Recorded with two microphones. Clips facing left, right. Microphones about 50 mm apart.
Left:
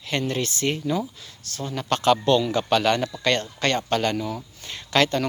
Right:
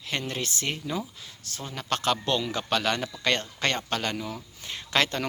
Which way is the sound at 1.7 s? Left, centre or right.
Centre.